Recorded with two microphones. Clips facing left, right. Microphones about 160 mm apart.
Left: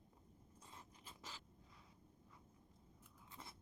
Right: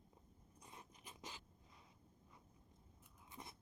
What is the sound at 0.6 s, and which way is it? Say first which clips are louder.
Zipper: right 2 dB; 15° right (ahead or behind).